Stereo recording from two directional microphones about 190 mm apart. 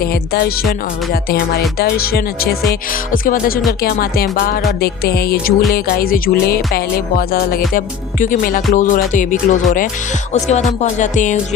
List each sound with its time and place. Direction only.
0.0 s speech: 55° left (ahead or behind)
10.3 s music: 40° left (ahead or behind)